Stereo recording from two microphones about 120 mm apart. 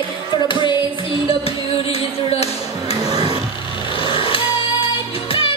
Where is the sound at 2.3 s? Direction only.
55° left (ahead or behind).